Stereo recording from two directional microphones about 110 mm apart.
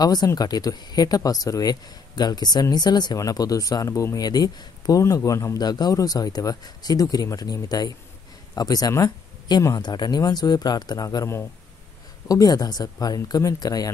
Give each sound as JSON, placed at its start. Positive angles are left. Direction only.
{"t": 0.0, "sound": "speech", "side_deg": 35}
{"t": 9.8, "sound": "speech", "side_deg": 40}